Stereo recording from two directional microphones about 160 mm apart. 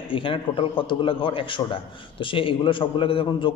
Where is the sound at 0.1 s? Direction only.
35° left (ahead or behind).